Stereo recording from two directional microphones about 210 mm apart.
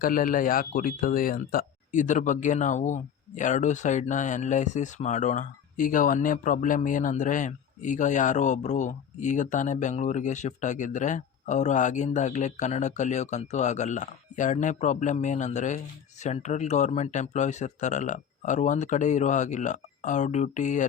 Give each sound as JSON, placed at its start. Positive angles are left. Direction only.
{"t": 0.0, "sound": "speech", "side_deg": 40}